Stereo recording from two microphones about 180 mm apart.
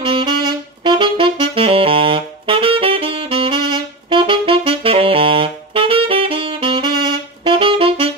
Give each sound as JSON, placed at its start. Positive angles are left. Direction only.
{"t": 0.0, "sound": "saxophone", "side_deg": -25}